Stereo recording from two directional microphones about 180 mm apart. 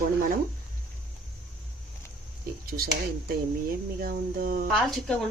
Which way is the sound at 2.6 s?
55° right (ahead or behind).